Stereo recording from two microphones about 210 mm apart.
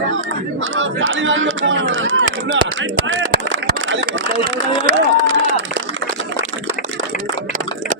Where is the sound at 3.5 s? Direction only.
65° right (ahead or behind).